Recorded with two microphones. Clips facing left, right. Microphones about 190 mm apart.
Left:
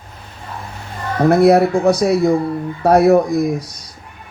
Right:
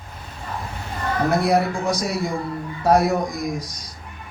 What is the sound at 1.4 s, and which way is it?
Speech, 60° left (ahead or behind).